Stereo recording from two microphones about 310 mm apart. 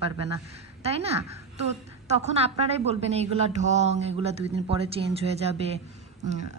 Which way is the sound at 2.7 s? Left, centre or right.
Centre.